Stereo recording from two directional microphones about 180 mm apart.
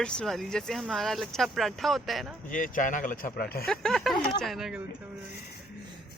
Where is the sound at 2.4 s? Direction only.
45° left (ahead or behind).